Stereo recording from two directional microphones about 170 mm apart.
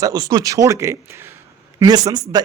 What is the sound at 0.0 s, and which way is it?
Speech, 20° right (ahead or behind).